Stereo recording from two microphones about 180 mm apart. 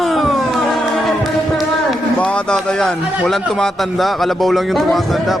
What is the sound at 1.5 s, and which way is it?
Music, centre (ahead or behind).